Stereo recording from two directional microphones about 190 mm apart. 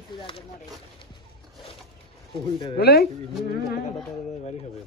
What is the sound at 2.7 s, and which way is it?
Speech, 55° left (ahead or behind).